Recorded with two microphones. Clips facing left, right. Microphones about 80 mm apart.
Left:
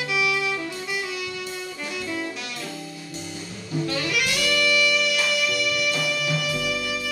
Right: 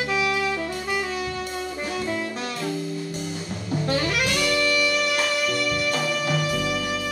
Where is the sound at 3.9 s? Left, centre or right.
Right.